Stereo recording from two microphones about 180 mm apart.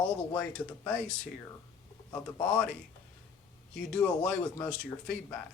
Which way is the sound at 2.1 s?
10° left (ahead or behind).